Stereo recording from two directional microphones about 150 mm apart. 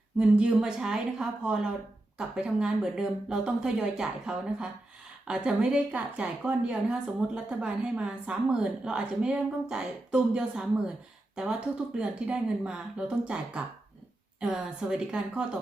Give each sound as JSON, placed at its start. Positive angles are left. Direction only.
{"t": 0.2, "sound": "a woman's voice", "side_deg": -5}
{"t": 11.9, "sound": "a woman's voice", "side_deg": -5}